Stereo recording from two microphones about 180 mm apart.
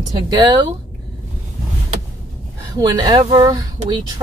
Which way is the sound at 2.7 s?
20° right (ahead or behind).